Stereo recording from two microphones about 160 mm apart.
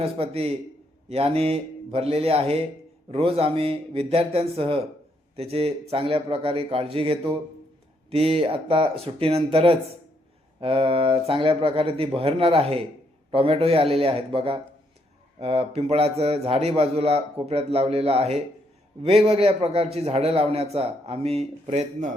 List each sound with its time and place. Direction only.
0.0 s a man's voice: 40° right (ahead or behind)